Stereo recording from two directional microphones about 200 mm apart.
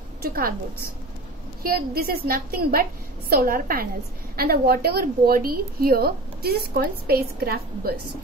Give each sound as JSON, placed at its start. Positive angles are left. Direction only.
{"t": 0.2, "sound": "a woman's voice", "side_deg": -45}
{"t": 1.6, "sound": "a woman's voice", "side_deg": -50}